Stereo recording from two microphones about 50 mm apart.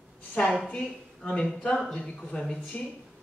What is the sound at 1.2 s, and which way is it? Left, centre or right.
A woman's voice, centre.